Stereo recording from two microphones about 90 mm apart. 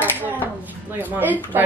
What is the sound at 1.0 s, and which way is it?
Speech, 20° right (ahead or behind).